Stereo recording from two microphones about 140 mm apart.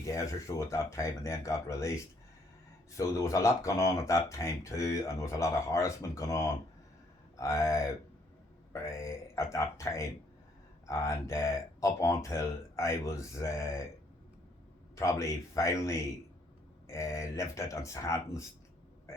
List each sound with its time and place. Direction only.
0.0 s speech: 20° left (ahead or behind)
3.0 s speech: 20° left (ahead or behind)
14.9 s speech: 20° left (ahead or behind)